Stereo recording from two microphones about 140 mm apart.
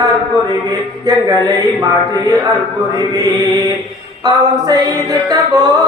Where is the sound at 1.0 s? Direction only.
25° right (ahead or behind).